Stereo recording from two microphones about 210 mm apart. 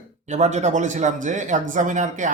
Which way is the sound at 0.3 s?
35° right (ahead or behind).